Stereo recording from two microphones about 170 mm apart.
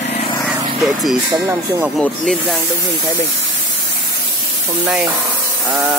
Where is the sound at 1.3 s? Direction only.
20° right (ahead or behind).